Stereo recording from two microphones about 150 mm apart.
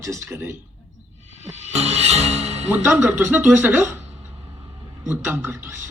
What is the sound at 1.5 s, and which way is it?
Speech, 45° right (ahead or behind).